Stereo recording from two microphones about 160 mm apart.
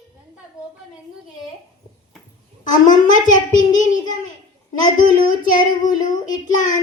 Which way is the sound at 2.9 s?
55° left (ahead or behind).